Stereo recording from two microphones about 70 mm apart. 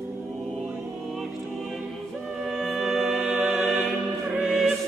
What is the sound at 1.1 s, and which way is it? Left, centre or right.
Music, centre.